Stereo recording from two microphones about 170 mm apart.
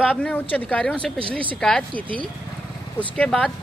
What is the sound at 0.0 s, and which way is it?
Speech, 5° left (ahead or behind).